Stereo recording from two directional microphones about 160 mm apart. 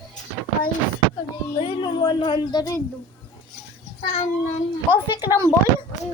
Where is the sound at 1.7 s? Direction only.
30° left (ahead or behind).